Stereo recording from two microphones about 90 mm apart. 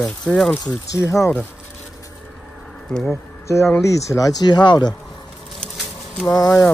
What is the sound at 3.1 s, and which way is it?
Speech, 35° left (ahead or behind).